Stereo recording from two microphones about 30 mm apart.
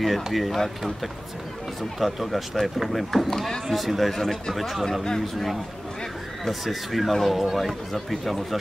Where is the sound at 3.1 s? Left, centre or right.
Centre.